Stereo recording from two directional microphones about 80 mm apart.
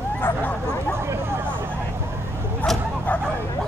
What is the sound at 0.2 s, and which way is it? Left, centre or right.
Bow-wow, left.